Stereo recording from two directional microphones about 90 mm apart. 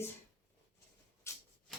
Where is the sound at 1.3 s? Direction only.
30° left (ahead or behind).